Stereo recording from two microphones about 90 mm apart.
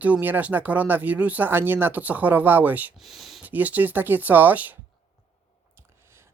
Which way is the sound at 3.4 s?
20° right (ahead or behind).